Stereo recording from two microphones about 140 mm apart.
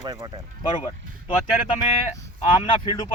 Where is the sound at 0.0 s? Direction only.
30° right (ahead or behind).